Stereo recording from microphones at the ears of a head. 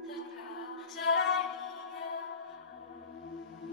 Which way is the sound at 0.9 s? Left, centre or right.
Left.